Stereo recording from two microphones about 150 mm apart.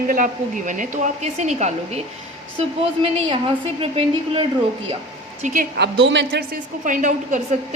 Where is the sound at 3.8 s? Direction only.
40° right (ahead or behind).